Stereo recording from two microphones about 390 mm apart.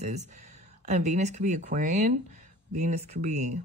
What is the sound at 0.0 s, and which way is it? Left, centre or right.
Speech, centre.